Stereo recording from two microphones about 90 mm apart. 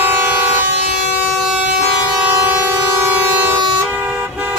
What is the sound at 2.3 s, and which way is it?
Vehicle, 30° right (ahead or behind).